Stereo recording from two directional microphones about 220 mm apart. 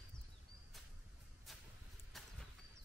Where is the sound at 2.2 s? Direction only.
Centre (ahead or behind).